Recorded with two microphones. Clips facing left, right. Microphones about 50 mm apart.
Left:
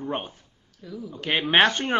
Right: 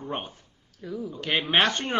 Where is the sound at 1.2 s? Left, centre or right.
Centre.